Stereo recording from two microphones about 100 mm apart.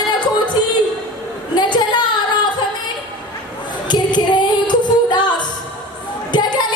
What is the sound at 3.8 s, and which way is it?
Music, 50° left (ahead or behind).